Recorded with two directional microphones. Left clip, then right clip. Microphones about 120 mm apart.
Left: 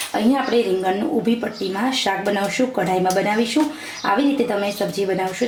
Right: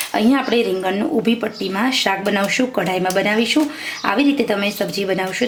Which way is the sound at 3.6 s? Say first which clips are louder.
Right 1 dB; 45° right (ahead or behind).